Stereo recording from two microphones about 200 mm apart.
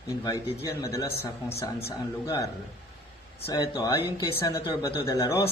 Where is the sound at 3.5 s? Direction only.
15° left (ahead or behind).